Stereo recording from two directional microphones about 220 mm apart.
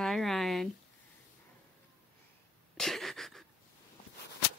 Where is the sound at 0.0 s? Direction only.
Centre (ahead or behind).